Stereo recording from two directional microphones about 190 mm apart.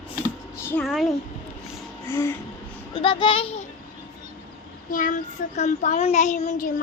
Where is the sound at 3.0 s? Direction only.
25° left (ahead or behind).